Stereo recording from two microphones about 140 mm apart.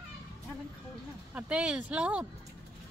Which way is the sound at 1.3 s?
10° right (ahead or behind).